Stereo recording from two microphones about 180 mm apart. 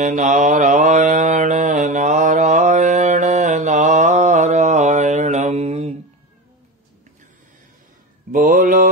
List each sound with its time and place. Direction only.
0.0 s mantra: 45° right (ahead or behind)
8.3 s mantra: 50° right (ahead or behind)